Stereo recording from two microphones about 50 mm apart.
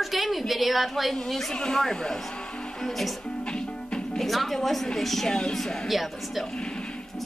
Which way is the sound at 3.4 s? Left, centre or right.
Centre.